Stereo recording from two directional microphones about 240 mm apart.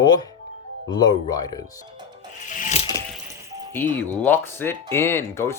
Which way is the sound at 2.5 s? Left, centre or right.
Left.